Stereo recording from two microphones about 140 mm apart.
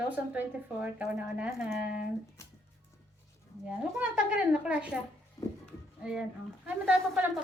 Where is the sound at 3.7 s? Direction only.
10° right (ahead or behind).